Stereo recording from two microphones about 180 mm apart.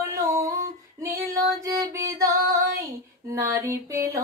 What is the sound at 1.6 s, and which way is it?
Music, 20° right (ahead or behind).